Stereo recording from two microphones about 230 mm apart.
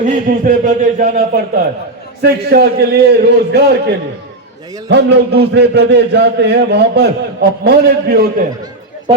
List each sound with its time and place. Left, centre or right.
0.0 s a man's voice: right